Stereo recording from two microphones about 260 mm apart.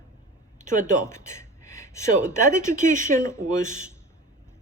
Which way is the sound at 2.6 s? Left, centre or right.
Right.